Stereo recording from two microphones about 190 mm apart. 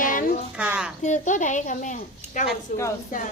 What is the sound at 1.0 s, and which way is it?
Speech, 40° left (ahead or behind).